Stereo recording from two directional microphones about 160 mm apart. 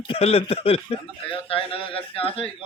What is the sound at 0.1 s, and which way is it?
Speech, 35° left (ahead or behind).